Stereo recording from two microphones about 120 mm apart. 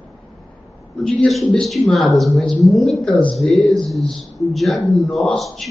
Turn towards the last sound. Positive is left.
turn(degrees=5)  # may be behind; listen again after turning